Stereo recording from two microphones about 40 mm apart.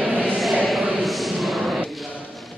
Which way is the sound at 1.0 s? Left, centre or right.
Centre.